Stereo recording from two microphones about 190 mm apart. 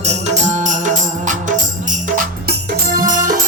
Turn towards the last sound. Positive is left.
turn(degrees=-45)  # may be behind; listen again after turning